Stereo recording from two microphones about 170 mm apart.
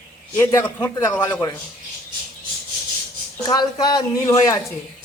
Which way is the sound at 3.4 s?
25° left (ahead or behind).